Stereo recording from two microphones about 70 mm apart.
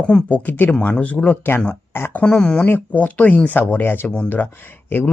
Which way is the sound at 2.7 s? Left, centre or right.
Left.